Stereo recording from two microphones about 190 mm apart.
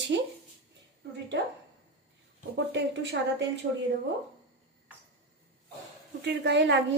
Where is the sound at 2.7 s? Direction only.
65° right (ahead or behind).